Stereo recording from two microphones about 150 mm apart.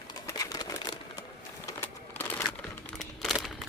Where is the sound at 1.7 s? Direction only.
15° left (ahead or behind).